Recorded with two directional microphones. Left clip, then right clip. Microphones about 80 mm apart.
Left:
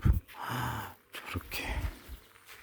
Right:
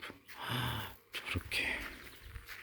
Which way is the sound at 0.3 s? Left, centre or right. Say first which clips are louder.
Left 1 dB; left.